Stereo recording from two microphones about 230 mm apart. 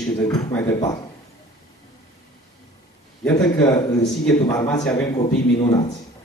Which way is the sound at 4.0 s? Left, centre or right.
Centre.